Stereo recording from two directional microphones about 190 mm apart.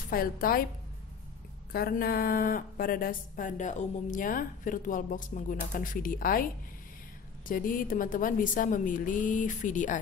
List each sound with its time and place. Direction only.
0.1 s speech: 50° left (ahead or behind)
1.7 s speech: 50° left (ahead or behind)
7.4 s speech: 45° left (ahead or behind)